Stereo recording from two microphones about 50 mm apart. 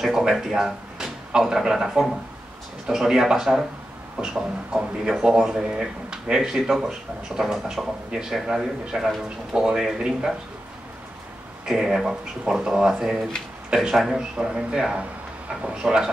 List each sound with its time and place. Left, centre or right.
0.0 s speech: centre
11.6 s speech: centre